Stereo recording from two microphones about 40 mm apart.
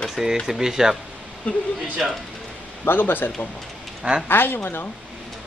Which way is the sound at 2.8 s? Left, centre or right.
Left.